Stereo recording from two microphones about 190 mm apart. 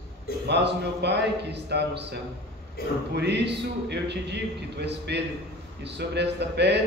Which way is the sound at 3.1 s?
65° right (ahead or behind).